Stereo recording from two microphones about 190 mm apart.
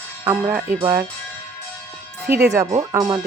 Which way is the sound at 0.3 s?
10° right (ahead or behind).